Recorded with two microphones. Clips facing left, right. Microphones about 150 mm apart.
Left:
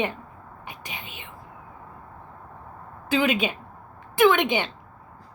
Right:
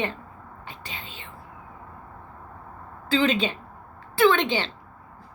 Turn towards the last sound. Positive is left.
turn(degrees=15)  # may be behind; listen again after turning